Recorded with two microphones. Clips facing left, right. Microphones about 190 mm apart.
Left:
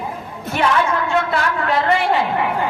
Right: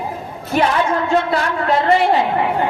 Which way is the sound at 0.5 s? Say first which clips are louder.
Right 2 dB; 40° right (ahead or behind).